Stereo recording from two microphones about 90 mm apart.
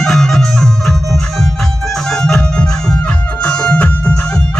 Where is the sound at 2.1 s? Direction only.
5° left (ahead or behind).